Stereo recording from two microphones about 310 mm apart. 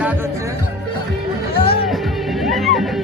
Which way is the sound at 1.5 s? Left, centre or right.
Centre.